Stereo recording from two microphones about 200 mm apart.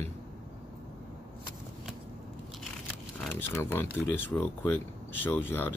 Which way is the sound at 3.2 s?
10° left (ahead or behind).